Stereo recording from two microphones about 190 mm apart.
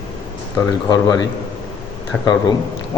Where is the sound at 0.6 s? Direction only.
20° left (ahead or behind).